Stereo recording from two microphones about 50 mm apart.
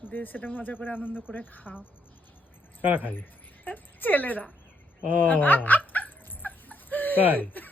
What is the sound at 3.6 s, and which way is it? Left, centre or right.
Speech, left.